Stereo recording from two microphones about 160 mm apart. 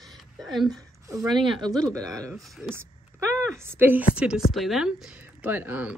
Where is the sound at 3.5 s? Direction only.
15° right (ahead or behind).